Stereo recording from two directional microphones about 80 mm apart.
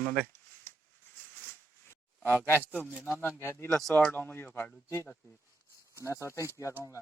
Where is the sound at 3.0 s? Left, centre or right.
Left.